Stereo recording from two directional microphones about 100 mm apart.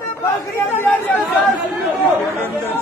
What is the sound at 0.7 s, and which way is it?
Chatter, 15° left (ahead or behind).